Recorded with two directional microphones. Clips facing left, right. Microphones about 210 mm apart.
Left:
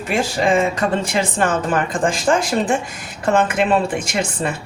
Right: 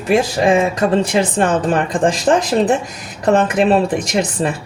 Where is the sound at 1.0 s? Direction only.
35° right (ahead or behind).